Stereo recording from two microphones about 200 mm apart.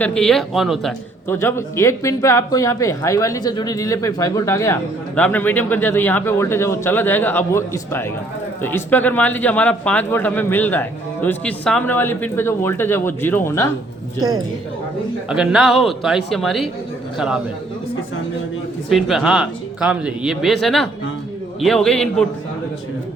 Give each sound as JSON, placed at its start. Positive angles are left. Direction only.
{"t": 0.0, "sound": "speech", "side_deg": 5}
{"t": 1.4, "sound": "speech", "side_deg": 15}
{"t": 14.2, "sound": "a woman's voice", "side_deg": -20}
{"t": 15.3, "sound": "speech", "side_deg": -5}
{"t": 18.9, "sound": "speech", "side_deg": 0}